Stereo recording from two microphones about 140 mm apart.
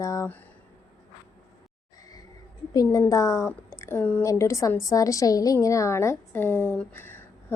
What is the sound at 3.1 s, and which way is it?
A woman's voice, 20° left (ahead or behind).